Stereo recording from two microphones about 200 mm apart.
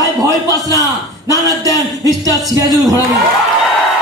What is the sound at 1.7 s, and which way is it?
Speech, 20° right (ahead or behind).